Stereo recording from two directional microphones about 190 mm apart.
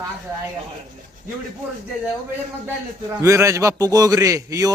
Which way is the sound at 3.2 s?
15° right (ahead or behind).